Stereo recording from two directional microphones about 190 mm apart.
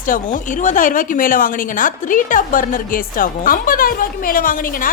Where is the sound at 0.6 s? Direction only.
45° left (ahead or behind).